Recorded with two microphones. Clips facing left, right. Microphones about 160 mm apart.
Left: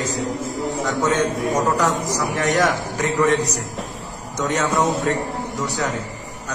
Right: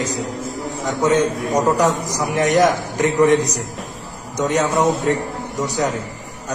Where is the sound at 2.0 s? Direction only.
15° right (ahead or behind).